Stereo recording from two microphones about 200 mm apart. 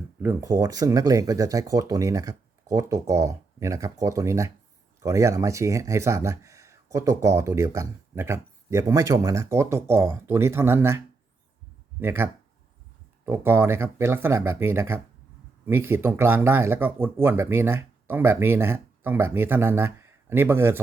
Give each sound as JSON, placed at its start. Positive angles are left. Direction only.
{"t": 0.2, "sound": "speech", "side_deg": -15}